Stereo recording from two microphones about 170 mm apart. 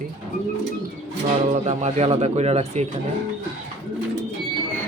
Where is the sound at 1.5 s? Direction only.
40° right (ahead or behind).